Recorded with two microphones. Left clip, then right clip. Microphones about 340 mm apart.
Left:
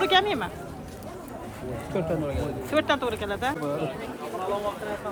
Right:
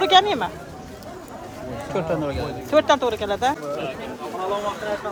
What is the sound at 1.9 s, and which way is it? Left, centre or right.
Speech, right.